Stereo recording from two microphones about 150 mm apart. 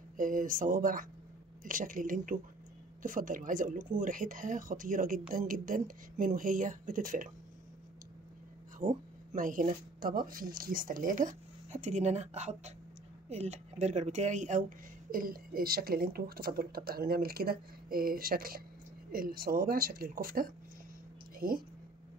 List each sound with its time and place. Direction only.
0.2 s speech: 65° right (ahead or behind)
8.7 s speech: 60° right (ahead or behind)
15.0 s speech: 75° right (ahead or behind)